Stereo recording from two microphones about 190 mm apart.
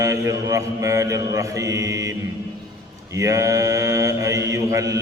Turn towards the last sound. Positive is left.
turn(degrees=-15)  # may be behind; listen again after turning